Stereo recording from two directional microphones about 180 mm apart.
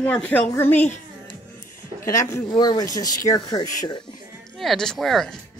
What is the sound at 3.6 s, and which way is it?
Speech, 45° left (ahead or behind).